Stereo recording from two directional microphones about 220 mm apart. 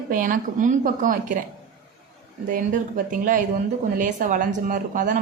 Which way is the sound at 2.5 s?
40° right (ahead or behind).